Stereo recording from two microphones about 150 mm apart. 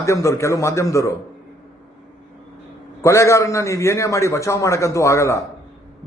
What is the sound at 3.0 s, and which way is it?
A man's voice, 20° left (ahead or behind).